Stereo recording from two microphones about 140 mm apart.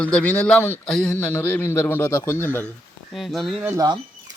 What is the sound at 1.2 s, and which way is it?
Speech, 15° left (ahead or behind).